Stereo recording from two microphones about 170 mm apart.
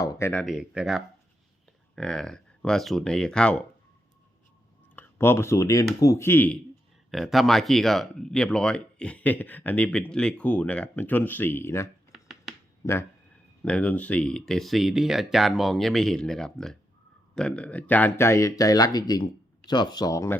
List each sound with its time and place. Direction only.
0.0 s speech: 20° left (ahead or behind)
0.4 s speech: 5° right (ahead or behind)
4.9 s speech: 15° left (ahead or behind)
7.1 s speech: centre (ahead or behind); by 11.9 s 15° left (ahead or behind)
12.1 s finger snapping: centre (ahead or behind)
12.8 s speech: 15° left (ahead or behind)